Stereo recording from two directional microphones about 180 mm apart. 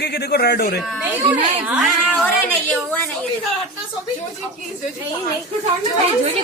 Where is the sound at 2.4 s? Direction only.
10° left (ahead or behind).